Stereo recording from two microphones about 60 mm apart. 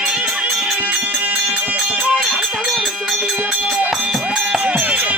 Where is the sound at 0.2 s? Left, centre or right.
Right.